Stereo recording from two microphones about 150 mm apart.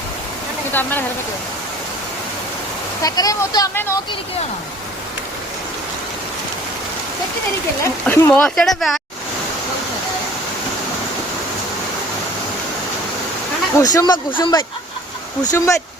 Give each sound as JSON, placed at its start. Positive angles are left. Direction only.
{"t": 0.7, "sound": "speech", "side_deg": 15}
{"t": 3.0, "sound": "speech", "side_deg": 25}
{"t": 8.0, "sound": "speech", "side_deg": 10}
{"t": 13.7, "sound": "speech", "side_deg": 25}
{"t": 15.4, "sound": "speech", "side_deg": 20}